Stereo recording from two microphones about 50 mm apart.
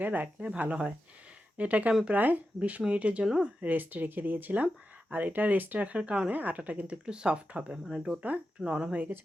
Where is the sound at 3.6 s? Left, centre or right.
Right.